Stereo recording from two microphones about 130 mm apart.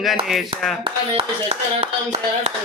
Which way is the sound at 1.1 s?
50° right (ahead or behind).